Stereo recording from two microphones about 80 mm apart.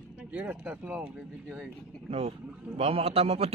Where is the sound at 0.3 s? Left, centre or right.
Right.